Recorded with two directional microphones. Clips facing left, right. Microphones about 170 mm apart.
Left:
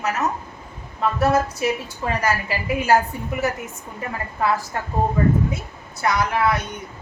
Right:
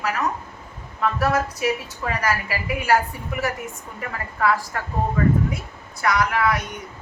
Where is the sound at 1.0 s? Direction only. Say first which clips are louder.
Left 2 dB; 25° left (ahead or behind).